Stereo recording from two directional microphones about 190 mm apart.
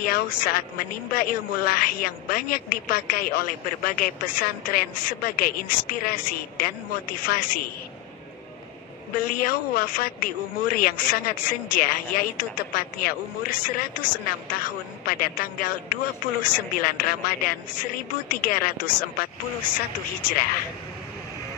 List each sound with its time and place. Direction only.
0.0 s a woman's voice: 50° left (ahead or behind)
9.1 s a woman's voice: 50° left (ahead or behind)